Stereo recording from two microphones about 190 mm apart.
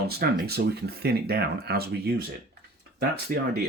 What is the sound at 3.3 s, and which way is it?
Speech, 50° right (ahead or behind).